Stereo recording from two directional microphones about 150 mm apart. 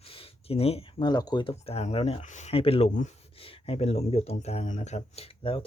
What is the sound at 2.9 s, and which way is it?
Speech, 55° left (ahead or behind).